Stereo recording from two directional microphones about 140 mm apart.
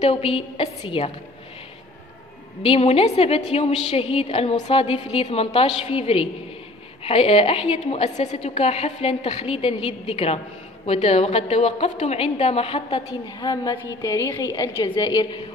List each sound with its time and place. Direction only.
0.0 s a woman's voice: 40° left (ahead or behind)
2.6 s a woman's voice: 45° left (ahead or behind)
13.4 s a woman's voice: 30° left (ahead or behind)